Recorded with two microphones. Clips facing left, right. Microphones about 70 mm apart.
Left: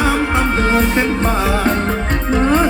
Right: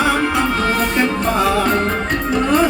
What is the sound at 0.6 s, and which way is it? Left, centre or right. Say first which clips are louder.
Music: left 2 dB; left.